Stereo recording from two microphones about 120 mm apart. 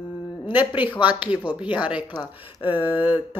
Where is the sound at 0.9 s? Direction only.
40° left (ahead or behind).